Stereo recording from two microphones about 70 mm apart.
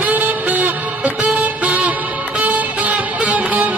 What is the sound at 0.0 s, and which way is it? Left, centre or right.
Music, right.